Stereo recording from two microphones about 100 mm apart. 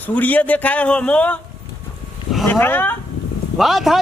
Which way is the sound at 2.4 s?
20° left (ahead or behind).